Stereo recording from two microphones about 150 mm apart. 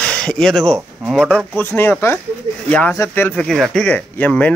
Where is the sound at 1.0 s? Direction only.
5° right (ahead or behind).